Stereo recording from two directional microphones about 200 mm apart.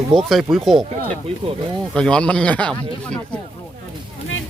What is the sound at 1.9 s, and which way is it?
Speech, 5° left (ahead or behind).